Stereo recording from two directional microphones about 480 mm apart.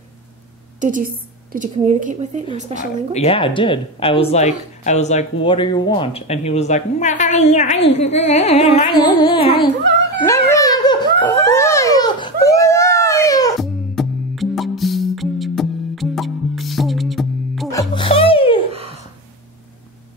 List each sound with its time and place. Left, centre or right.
0.7 s a woman's voice: centre
2.8 s a woman's voice: centre
10.2 s a sound: centre
18.7 s gasp: centre